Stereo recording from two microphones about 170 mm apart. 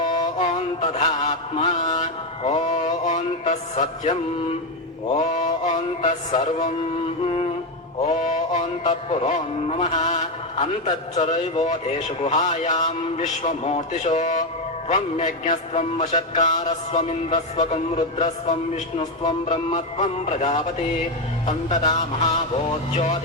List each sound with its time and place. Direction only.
0.1 s mantra: 45° left (ahead or behind)
1.9 s music: 40° left (ahead or behind)
5.1 s mantra: 45° left (ahead or behind)
8.1 s a man's voice: 45° left (ahead or behind)
23.0 s speech: 45° left (ahead or behind)